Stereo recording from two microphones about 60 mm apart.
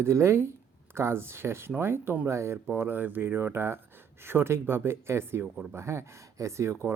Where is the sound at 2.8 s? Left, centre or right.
Right.